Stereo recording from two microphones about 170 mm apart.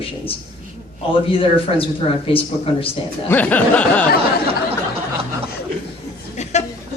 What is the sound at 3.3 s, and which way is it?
Speech, 10° left (ahead or behind).